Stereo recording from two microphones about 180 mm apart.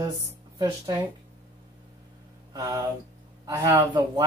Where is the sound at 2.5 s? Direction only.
20° right (ahead or behind).